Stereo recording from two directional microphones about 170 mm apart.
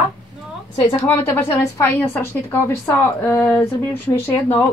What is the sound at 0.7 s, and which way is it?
Speech, 20° left (ahead or behind).